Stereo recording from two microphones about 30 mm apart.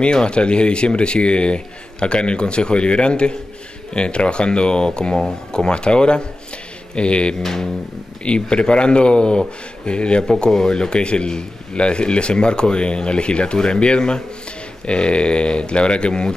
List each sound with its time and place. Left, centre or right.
0.0 s a man's voice: left
7.3 s a sound: centre
8.2 s a man's voice: left